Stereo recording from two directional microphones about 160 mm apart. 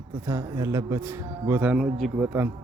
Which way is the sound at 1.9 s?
Centre (ahead or behind).